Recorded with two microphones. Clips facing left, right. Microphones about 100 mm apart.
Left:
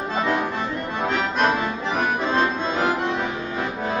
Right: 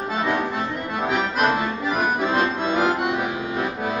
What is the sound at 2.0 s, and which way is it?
Music, 5° right (ahead or behind).